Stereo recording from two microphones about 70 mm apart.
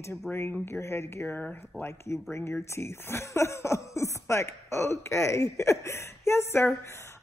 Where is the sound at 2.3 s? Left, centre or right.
Left.